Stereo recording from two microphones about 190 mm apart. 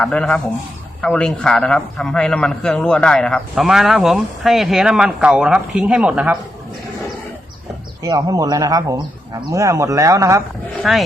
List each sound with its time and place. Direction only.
0.0 s a man's voice: 5° left (ahead or behind)
8.0 s speech: 20° right (ahead or behind)
10.8 s a man's voice: centre (ahead or behind)